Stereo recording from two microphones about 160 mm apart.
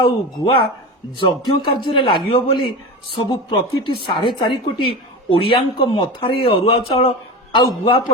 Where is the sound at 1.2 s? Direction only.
30° left (ahead or behind).